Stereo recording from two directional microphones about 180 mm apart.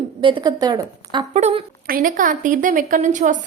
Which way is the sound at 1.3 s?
40° right (ahead or behind).